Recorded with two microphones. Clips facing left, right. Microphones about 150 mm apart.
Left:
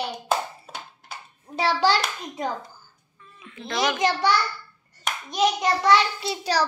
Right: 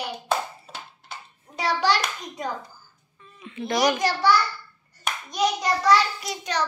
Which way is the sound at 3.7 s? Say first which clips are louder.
Right 1 dB; 20° left (ahead or behind).